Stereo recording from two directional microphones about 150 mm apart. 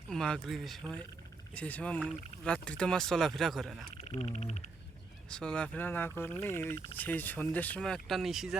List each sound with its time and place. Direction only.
0.1 s speech: 5° left (ahead or behind)
4.1 s speech: 45° left (ahead or behind)
5.3 s speech: 5° left (ahead or behind)